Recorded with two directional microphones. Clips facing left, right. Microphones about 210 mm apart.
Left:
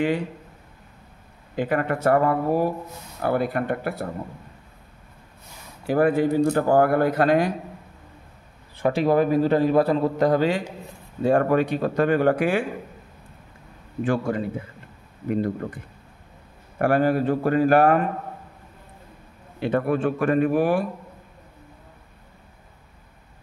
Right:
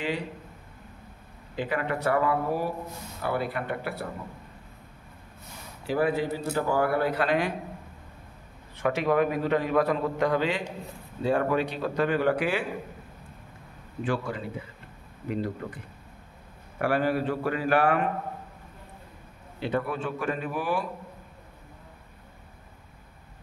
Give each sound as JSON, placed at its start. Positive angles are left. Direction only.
{"t": 1.6, "sound": "speech", "side_deg": 50}
{"t": 5.9, "sound": "speech", "side_deg": 50}
{"t": 8.7, "sound": "a man's voice", "side_deg": 35}
{"t": 14.0, "sound": "speech", "side_deg": 45}
{"t": 19.6, "sound": "speech", "side_deg": 55}